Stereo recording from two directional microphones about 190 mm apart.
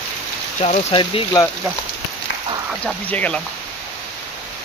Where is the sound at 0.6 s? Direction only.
35° left (ahead or behind).